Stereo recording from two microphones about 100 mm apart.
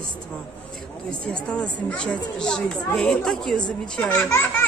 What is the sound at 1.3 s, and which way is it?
A woman's voice, 10° left (ahead or behind).